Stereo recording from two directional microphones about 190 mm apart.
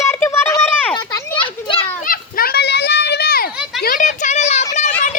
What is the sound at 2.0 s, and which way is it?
Children playing, 50° left (ahead or behind).